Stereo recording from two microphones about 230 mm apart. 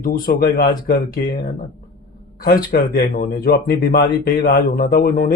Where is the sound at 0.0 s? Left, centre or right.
Left.